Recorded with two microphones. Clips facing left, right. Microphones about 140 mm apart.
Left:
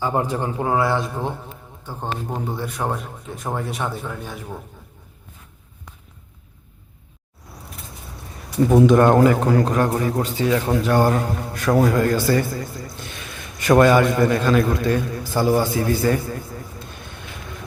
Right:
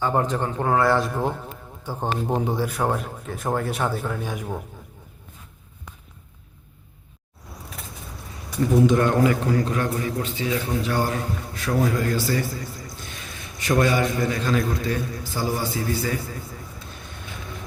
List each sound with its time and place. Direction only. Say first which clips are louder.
0.0 s speech: left 1 dB; 15° left (ahead or behind)
0.8 s speech: right 1 dB; centre (ahead or behind)
1.9 s speech: right 3 dB; 10° right (ahead or behind)
9.0 s a man's voice: left 6 dB; 50° left (ahead or behind)
10.4 s a man's voice: left 6 dB; 60° left (ahead or behind)
13.6 s a man's voice: left 7 dB; 60° left (ahead or behind)